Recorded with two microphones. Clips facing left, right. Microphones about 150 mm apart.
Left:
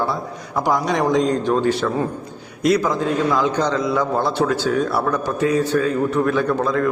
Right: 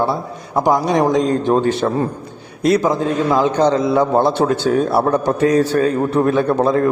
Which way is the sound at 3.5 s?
55° right (ahead or behind).